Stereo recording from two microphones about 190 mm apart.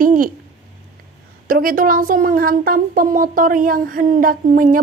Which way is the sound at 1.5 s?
50° right (ahead or behind).